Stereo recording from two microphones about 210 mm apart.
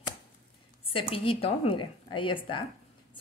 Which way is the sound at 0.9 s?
25° left (ahead or behind).